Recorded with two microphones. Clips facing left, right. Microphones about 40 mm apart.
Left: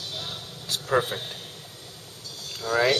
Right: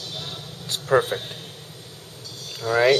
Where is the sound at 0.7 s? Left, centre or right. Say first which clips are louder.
Right 4 dB; centre.